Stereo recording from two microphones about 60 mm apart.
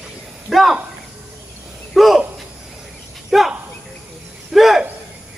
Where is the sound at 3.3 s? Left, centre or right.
Centre.